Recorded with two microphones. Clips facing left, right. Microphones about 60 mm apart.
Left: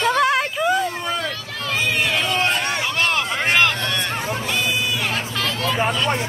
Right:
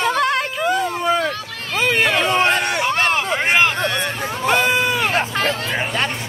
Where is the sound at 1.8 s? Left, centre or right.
Right.